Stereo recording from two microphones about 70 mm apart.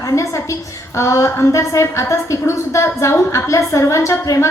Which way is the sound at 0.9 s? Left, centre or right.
Left.